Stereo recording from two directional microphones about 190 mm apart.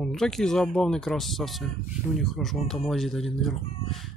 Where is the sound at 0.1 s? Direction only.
Centre (ahead or behind).